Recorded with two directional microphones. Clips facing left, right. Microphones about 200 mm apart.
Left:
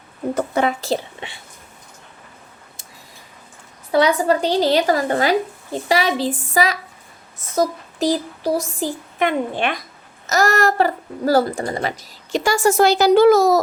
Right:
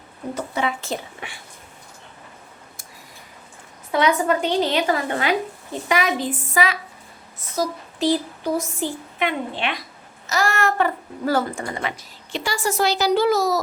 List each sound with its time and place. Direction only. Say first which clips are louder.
0.3 s a woman's voice: left 5 dB; 45° left (ahead or behind); by 1.4 s 30° left (ahead or behind)
3.9 s a woman's voice: left 3 dB; 35° left (ahead or behind); by 13.6 s 50° left (ahead or behind)